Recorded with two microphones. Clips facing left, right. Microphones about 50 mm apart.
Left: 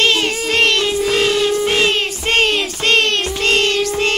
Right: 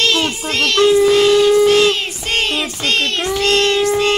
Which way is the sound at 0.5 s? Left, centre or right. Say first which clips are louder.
Right 4 dB; left.